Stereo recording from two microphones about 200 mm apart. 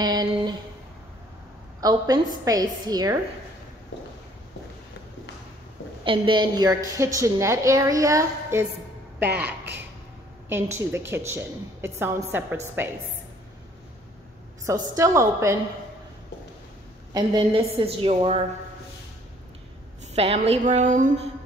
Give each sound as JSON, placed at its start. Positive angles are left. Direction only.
{"t": 0.0, "sound": "a sound", "side_deg": -20}
{"t": 1.8, "sound": "a woman's voice", "side_deg": -20}
{"t": 6.0, "sound": "a woman's voice", "side_deg": -25}
{"t": 10.5, "sound": "a woman's voice", "side_deg": -10}
{"t": 15.0, "sound": "a woman's voice", "side_deg": -15}
{"t": 17.1, "sound": "a woman's voice", "side_deg": -25}
{"t": 20.2, "sound": "a woman's voice", "side_deg": -30}